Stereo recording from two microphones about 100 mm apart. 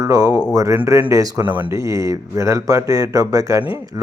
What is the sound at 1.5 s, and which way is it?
Speech, 20° right (ahead or behind).